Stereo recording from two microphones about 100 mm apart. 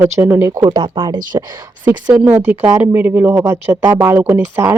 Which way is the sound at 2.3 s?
20° right (ahead or behind).